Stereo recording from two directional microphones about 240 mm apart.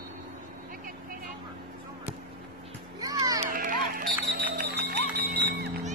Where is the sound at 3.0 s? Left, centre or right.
Centre.